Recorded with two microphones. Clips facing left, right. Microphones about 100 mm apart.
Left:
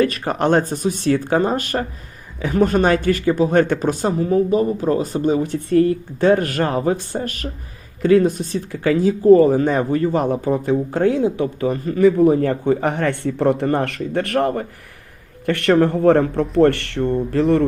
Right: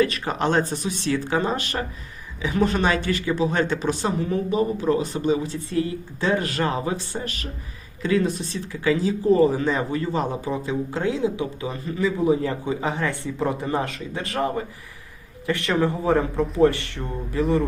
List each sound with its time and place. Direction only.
0.0 s speech: 50° left (ahead or behind); by 17.6 s 70° left (ahead or behind)